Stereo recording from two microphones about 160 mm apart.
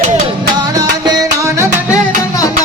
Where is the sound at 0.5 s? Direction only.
25° right (ahead or behind).